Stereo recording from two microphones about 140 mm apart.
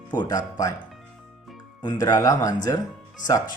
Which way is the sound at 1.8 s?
30° left (ahead or behind).